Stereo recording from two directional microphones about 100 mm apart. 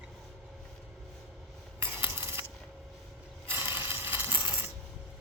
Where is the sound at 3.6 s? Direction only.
20° right (ahead or behind).